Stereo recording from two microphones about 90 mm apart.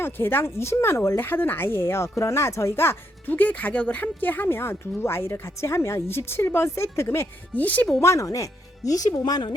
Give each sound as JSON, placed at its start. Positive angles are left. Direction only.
{"t": 0.0, "sound": "speech", "side_deg": 25}
{"t": 8.0, "sound": "speech", "side_deg": 35}